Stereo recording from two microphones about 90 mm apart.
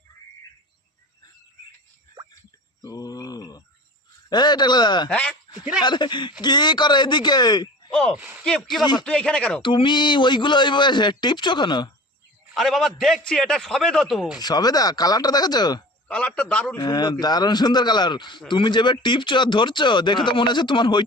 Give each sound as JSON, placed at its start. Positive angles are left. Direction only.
{"t": 2.8, "sound": "a sound", "side_deg": 45}
{"t": 4.3, "sound": "speech", "side_deg": 55}
{"t": 5.0, "sound": "a man's voice", "side_deg": 10}
{"t": 5.3, "sound": "a man's voice", "side_deg": -10}
{"t": 5.8, "sound": "speech", "side_deg": 55}
{"t": 7.9, "sound": "a sound", "side_deg": 5}
{"t": 8.1, "sound": "speech", "side_deg": -15}
{"t": 8.8, "sound": "speech", "side_deg": 55}
{"t": 9.0, "sound": "a man's voice", "side_deg": 10}
{"t": 9.6, "sound": "speech", "side_deg": 65}
{"t": 12.5, "sound": "speech", "side_deg": 0}
{"t": 14.3, "sound": "speech", "side_deg": 50}
{"t": 16.0, "sound": "a man's voice", "side_deg": 10}
{"t": 16.7, "sound": "speech", "side_deg": 50}